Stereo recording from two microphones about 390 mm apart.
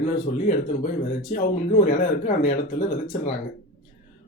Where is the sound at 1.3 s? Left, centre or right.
Centre.